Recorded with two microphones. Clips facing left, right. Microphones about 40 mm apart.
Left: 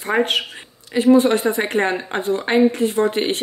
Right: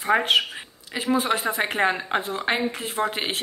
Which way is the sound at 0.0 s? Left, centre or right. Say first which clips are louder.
Left 1 dB; centre.